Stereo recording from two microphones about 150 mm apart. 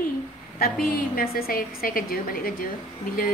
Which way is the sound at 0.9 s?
85° left.